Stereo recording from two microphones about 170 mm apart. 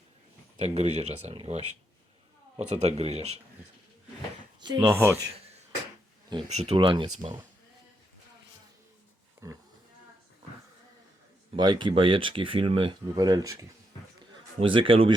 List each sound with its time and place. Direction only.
0.6 s speech: 40° right (ahead or behind)
4.6 s speech: 25° right (ahead or behind)
4.9 s speech: 15° right (ahead or behind)
6.3 s speech: 25° right (ahead or behind)
9.4 s speech: 15° right (ahead or behind)
11.5 s speech: 25° right (ahead or behind)
14.6 s speech: 30° right (ahead or behind)